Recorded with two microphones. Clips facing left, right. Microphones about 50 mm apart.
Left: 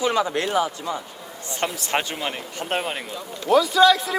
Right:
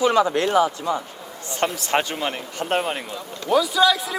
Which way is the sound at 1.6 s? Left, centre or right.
Right.